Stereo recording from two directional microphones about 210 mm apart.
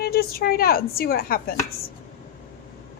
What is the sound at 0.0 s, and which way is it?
A woman's voice, 45° left (ahead or behind).